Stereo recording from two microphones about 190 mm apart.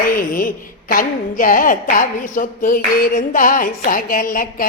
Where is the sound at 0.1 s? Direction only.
50° left (ahead or behind).